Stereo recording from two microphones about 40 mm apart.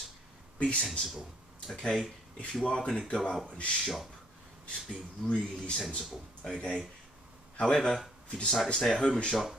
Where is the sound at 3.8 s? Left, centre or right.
Centre.